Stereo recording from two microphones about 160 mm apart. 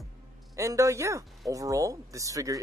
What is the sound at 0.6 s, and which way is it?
Speech, 20° right (ahead or behind).